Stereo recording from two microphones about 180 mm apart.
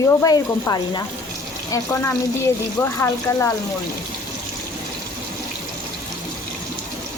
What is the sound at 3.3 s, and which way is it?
Speech, 15° left (ahead or behind).